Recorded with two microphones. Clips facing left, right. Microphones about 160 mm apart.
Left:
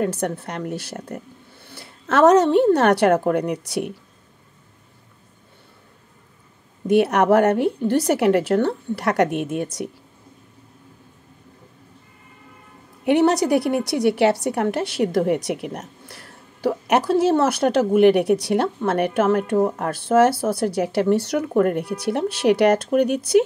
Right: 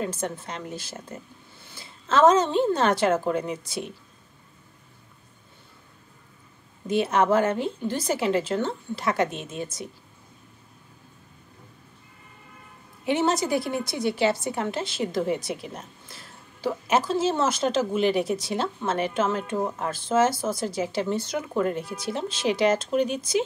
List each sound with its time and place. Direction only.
0.0 s a woman's voice: 65° left (ahead or behind)
6.9 s a woman's voice: 70° left (ahead or behind)
13.0 s a woman's voice: 65° left (ahead or behind)